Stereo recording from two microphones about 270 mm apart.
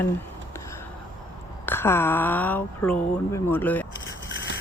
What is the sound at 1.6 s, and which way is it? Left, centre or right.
Speech, centre.